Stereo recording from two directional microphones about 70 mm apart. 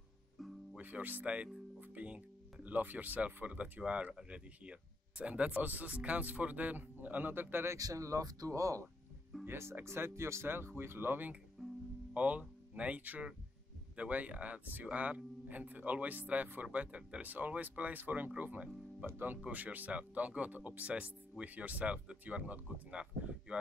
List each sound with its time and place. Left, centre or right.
0.7 s speech: right
7.7 s speech: right
9.4 s speech: right
12.1 s speech: centre